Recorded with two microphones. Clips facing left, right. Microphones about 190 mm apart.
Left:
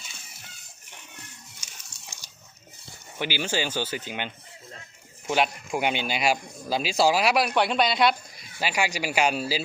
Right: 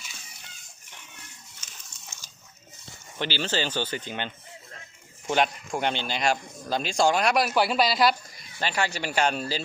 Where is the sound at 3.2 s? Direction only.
10° left (ahead or behind).